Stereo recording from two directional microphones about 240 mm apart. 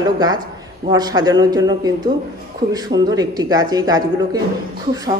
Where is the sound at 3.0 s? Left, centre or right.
Centre.